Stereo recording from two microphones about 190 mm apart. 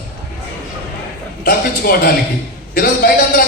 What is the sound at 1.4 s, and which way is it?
A man's voice, 50° left (ahead or behind).